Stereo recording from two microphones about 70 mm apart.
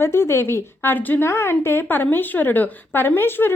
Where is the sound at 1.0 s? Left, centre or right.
Left.